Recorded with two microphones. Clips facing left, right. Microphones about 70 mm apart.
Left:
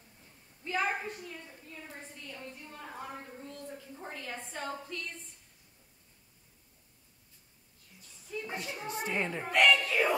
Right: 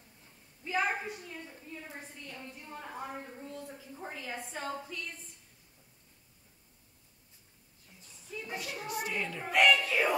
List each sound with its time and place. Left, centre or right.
0.7 s a woman's voice: centre
8.5 s a woman's voice: left
9.5 s speech: centre